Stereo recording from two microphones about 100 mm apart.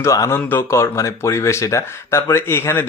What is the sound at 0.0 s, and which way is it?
Speech, 30° left (ahead or behind).